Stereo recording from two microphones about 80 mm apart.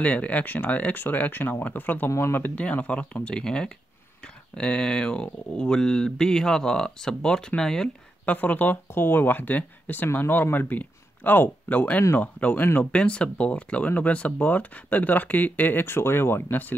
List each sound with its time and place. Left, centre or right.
0.0 s speech: centre
2.0 s speech: left
2.5 s speech: centre
8.3 s speech: left